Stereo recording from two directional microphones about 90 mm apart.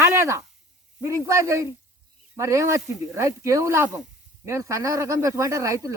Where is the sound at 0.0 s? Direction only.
30° right (ahead or behind).